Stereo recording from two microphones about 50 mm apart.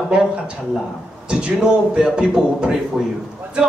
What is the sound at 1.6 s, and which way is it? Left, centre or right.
Speech, centre.